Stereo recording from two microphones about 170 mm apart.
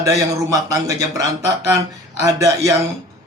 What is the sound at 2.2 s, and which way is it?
Speech, 20° right (ahead or behind).